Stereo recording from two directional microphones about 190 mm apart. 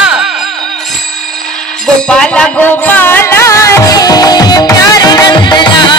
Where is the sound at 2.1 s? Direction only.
5° left (ahead or behind); by 6.0 s 25° left (ahead or behind).